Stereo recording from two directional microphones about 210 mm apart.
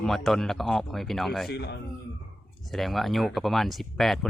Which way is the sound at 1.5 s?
50° left (ahead or behind).